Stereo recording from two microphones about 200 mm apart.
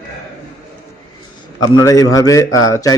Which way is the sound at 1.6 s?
20° left (ahead or behind).